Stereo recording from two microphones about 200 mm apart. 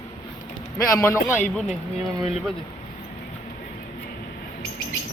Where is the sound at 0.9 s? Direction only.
15° left (ahead or behind).